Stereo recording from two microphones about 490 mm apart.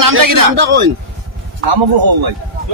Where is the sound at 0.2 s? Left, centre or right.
Right.